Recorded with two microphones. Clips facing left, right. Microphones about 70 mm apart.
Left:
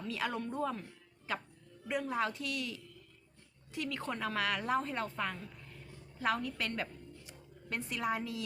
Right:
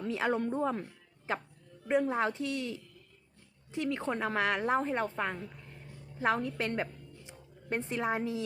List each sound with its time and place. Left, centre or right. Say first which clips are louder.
0.1 s a woman's voice: right 6 dB; right